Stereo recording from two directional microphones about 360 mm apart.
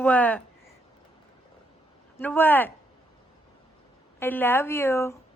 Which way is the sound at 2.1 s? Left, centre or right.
Centre.